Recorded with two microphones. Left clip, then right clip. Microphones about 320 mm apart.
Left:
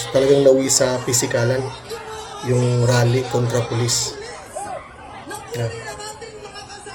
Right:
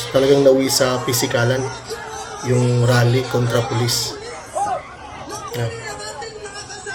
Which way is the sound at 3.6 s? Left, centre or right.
Left.